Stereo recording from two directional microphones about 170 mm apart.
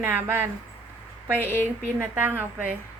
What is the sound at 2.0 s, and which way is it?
Speech, 10° right (ahead or behind).